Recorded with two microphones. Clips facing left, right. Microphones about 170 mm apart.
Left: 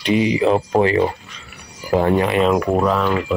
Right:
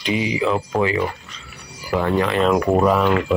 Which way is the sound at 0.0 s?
5° right (ahead or behind).